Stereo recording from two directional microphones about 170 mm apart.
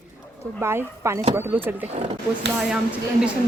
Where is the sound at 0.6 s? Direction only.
15° right (ahead or behind).